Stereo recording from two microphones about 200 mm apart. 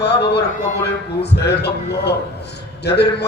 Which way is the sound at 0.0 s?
55° left (ahead or behind).